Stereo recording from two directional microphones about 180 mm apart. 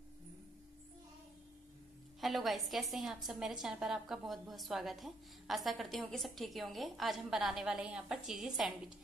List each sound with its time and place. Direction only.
2.1 s a woman's voice: centre (ahead or behind)